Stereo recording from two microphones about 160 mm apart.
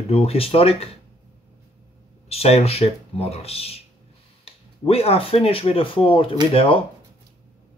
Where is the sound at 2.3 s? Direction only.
40° left (ahead or behind).